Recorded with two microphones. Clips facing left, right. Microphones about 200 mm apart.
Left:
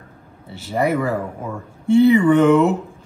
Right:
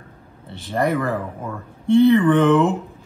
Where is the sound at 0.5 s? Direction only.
5° left (ahead or behind).